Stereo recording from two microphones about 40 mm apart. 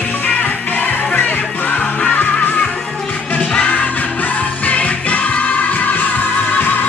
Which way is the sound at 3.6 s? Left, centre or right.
Left.